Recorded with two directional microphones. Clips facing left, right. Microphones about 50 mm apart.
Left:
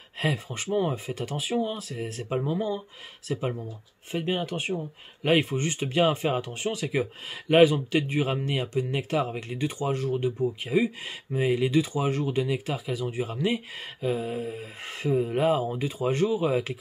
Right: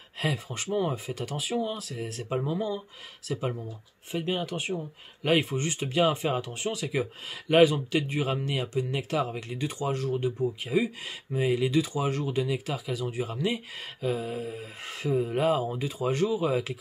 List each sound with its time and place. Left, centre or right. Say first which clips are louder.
0.2 s speech: left 2 dB; left
2.2 s speech: left 2 dB; centre